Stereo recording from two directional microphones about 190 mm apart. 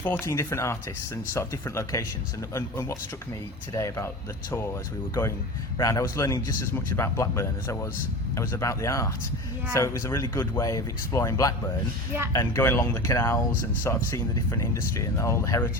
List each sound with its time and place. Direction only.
0.0 s speech: 15° left (ahead or behind)
5.7 s speech: 15° left (ahead or behind)